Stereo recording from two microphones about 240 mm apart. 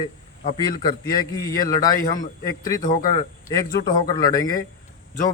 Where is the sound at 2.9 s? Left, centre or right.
Left.